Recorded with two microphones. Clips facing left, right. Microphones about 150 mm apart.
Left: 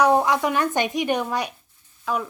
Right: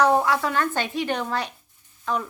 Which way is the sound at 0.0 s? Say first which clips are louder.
Left 1 dB; 15° left (ahead or behind).